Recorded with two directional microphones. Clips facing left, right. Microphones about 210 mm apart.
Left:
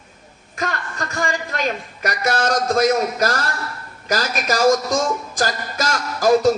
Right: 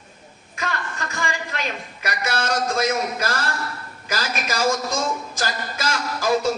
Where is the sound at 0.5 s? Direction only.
40° left (ahead or behind).